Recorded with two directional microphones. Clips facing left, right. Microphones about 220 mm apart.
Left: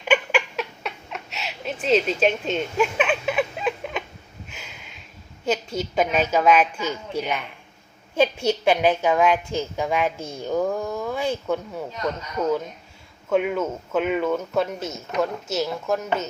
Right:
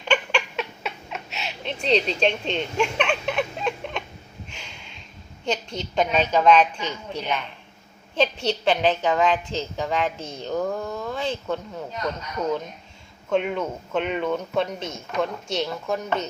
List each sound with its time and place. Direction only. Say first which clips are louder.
0.0 s a sound: left 2 dB; 5° left (ahead or behind)
5.5 s a woman's voice: left 3 dB; 5° left (ahead or behind)
13.3 s speech: left 2 dB; 5° left (ahead or behind)